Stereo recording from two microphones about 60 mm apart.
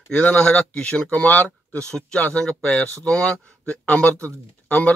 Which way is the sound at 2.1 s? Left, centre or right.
Left.